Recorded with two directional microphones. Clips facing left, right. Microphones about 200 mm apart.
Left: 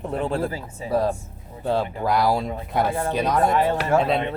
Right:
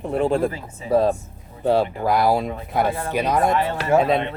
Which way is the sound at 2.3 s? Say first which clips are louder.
Right 2 dB; 20° right (ahead or behind).